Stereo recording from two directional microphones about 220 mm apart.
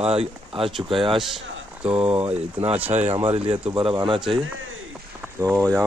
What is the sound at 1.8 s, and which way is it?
Speech, 5° right (ahead or behind).